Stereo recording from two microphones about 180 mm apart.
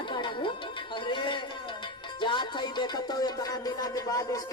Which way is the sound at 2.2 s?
25° left (ahead or behind).